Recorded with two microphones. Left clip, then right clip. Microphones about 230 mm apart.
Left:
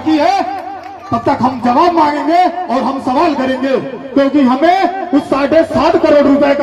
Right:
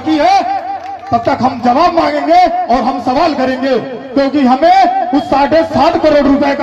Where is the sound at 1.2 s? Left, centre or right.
Right.